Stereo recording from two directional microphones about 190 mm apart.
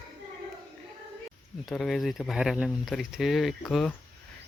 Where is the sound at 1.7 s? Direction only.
Centre (ahead or behind).